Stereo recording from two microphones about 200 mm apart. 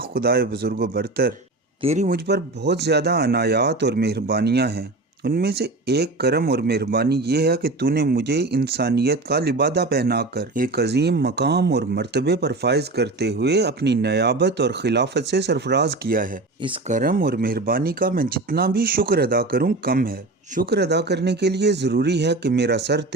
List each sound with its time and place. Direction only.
0.1 s speech: 50° right (ahead or behind)
1.8 s speech: 30° right (ahead or behind)
2.0 s speech: 55° right (ahead or behind)